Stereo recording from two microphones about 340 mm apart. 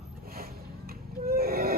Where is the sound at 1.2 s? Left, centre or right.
Right.